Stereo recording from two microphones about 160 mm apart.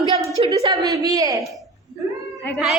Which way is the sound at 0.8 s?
25° right (ahead or behind).